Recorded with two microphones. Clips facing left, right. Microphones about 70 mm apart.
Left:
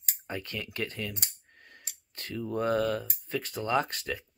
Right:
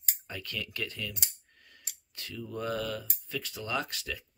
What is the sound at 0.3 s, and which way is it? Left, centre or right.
Speech, left.